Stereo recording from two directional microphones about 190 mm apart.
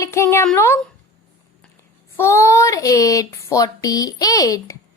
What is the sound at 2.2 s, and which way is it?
A woman's voice, 15° left (ahead or behind).